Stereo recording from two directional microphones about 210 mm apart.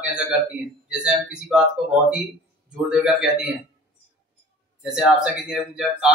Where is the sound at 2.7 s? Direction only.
5° right (ahead or behind).